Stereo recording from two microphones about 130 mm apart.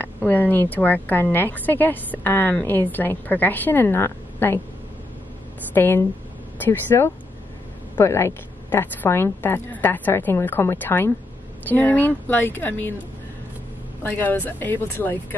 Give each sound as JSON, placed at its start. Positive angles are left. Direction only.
{"t": 0.0, "sound": "a woman's voice", "side_deg": 15}
{"t": 5.8, "sound": "a woman's voice", "side_deg": 15}
{"t": 14.0, "sound": "a woman's voice", "side_deg": 15}